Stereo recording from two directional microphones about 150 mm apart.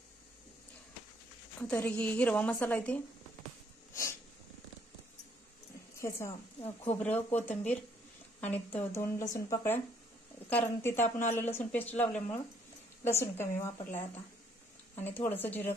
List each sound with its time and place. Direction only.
1.6 s a woman's voice: 10° left (ahead or behind)
3.9 s snort: 20° left (ahead or behind)
5.9 s a woman's voice: 20° left (ahead or behind)
15.2 s a woman's voice: 10° left (ahead or behind)